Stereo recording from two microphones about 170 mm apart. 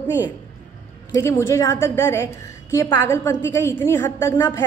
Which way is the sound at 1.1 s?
15° left (ahead or behind).